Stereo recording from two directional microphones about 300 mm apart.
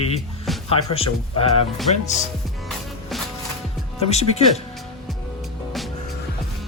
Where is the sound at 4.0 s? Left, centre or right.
Left.